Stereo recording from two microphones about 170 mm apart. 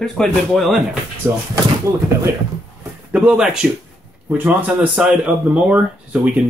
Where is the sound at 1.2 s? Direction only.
15° right (ahead or behind).